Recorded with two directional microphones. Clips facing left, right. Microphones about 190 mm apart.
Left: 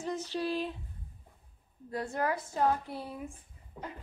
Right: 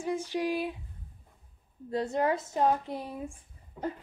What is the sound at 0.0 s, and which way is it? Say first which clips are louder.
Speech: right 3 dB; 10° right (ahead or behind).